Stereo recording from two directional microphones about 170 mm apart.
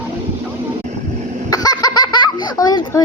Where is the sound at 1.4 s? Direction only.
20° left (ahead or behind).